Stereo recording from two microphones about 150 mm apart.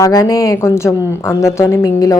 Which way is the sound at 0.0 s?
20° left (ahead or behind).